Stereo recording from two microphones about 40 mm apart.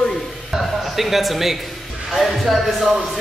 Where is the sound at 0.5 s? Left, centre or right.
Centre.